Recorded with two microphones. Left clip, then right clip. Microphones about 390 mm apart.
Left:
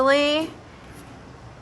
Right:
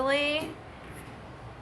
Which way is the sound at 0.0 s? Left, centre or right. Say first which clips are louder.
Left 8 dB; centre.